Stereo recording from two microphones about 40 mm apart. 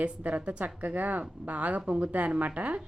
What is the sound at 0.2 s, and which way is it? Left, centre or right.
A woman's voice, right.